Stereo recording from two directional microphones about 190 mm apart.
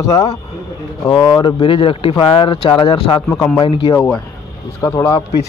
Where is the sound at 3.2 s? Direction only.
10° left (ahead or behind); by 3.9 s 25° left (ahead or behind).